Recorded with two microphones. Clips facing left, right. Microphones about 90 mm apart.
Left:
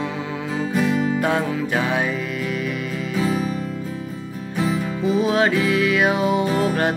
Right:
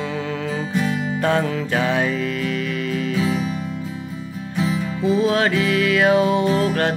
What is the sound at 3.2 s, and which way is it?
Music, 40° left (ahead or behind).